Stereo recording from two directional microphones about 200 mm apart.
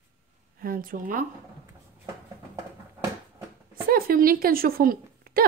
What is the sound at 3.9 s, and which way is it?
A woman's voice, 45° right (ahead or behind).